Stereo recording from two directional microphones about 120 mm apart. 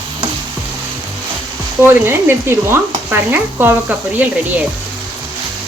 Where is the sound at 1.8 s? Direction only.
20° right (ahead or behind).